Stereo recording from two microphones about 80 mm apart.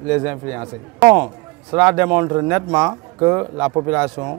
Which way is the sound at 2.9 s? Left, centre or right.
Right.